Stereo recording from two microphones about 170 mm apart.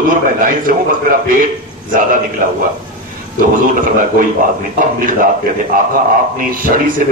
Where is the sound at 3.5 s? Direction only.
55° right (ahead or behind).